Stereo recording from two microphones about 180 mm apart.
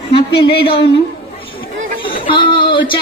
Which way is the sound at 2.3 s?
25° left (ahead or behind).